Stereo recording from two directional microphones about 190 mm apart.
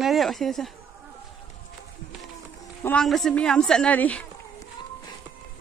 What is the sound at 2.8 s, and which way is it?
Speech, 5° left (ahead or behind).